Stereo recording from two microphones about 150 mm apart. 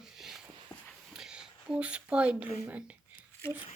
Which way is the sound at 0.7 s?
25° left (ahead or behind).